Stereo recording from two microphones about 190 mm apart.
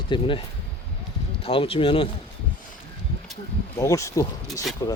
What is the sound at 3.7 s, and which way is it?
Speech, 15° left (ahead or behind).